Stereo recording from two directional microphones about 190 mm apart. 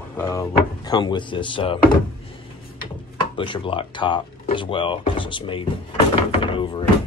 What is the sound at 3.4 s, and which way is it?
Speech, 25° left (ahead or behind).